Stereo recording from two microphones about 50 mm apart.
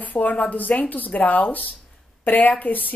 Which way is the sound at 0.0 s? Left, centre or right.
Left.